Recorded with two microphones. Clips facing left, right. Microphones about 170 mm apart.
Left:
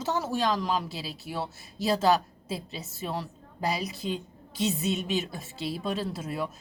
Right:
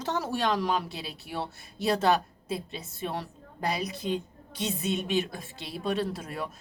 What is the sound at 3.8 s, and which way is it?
A woman's voice, 55° right (ahead or behind).